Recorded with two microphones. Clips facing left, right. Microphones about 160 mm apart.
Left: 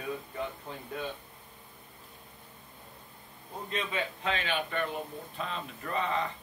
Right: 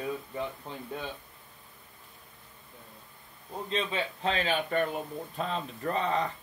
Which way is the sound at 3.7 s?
30° right (ahead or behind).